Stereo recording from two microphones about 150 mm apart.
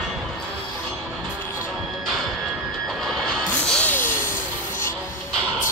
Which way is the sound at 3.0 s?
5° left (ahead or behind).